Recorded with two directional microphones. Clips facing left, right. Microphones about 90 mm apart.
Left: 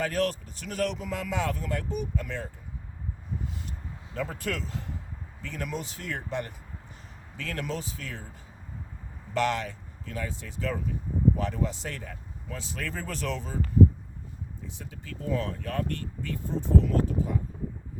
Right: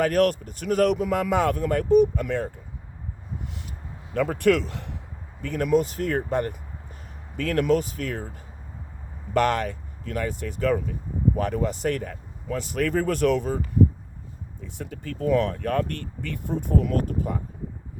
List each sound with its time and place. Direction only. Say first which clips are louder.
0.0 s speech: right 7 dB; 60° right (ahead or behind)
4.1 s speech: right 12 dB; 65° right (ahead or behind)
5.4 s speech: right 13 dB; 55° right (ahead or behind)
14.6 s speech: right 7 dB; 60° right (ahead or behind)